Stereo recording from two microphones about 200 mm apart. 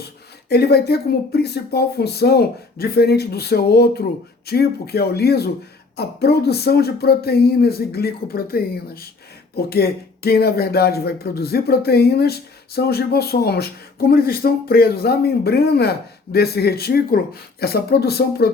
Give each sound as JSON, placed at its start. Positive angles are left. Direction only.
{"t": 0.4, "sound": "speech", "side_deg": 55}